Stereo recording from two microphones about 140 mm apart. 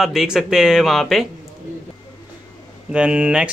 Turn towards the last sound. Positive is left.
turn(degrees=-5)  # may be behind; listen again after turning